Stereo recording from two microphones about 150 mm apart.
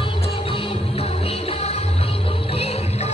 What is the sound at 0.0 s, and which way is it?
Music, 35° left (ahead or behind).